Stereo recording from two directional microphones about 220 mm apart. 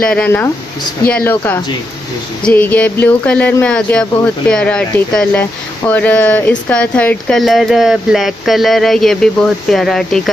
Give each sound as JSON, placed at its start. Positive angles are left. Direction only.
{"t": 0.1, "sound": "speech", "side_deg": 5}